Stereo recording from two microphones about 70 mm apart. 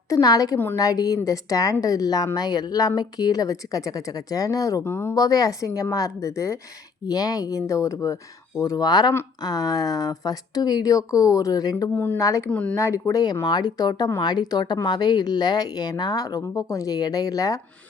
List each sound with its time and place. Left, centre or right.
0.1 s a woman's voice: left
4.8 s speech: left
5.1 s a woman's voice: left
7.1 s a woman's voice: left
8.6 s a woman's voice: left
12.1 s a woman's voice: left
12.5 s speech: centre
12.7 s a woman's voice: left
13.5 s speech: left
14.2 s a woman's voice: left